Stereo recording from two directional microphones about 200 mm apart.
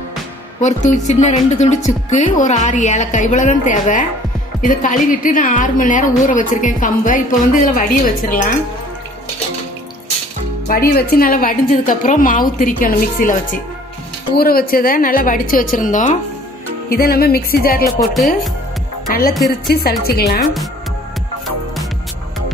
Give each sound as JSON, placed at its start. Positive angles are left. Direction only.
{"t": 0.6, "sound": "a woman's voice", "side_deg": 35}
{"t": 10.7, "sound": "a woman's voice", "side_deg": 45}
{"t": 18.1, "sound": "speech", "side_deg": 0}
{"t": 19.0, "sound": "a woman's voice", "side_deg": 45}